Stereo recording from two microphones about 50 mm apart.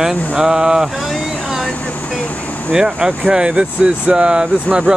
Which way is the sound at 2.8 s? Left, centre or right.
Centre.